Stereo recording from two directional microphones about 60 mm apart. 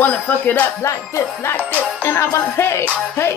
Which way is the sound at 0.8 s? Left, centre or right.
Left.